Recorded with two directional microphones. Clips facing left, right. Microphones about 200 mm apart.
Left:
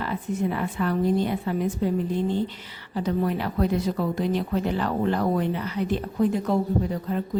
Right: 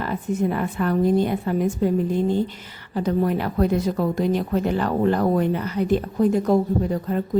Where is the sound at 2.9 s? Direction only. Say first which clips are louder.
Right 4 dB; 50° right (ahead or behind).